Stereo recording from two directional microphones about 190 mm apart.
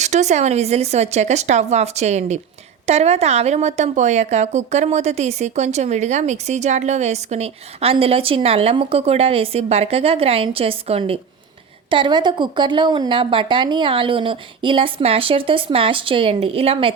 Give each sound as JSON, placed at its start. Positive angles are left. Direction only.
{"t": 0.0, "sound": "a woman's voice", "side_deg": -40}